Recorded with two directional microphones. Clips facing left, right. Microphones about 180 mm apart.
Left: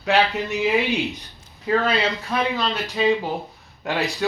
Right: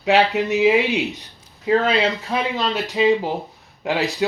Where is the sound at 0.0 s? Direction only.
20° right (ahead or behind).